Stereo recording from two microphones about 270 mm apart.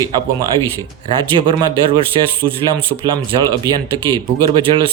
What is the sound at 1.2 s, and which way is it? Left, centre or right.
Speech, centre.